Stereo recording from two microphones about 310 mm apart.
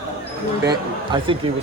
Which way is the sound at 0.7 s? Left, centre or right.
Centre.